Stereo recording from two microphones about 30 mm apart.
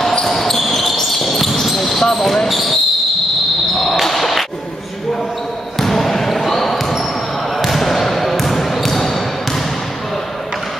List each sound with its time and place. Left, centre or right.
0.3 s basketball bounce: centre
4.0 s basketball bounce: centre
5.8 s basketball bounce: centre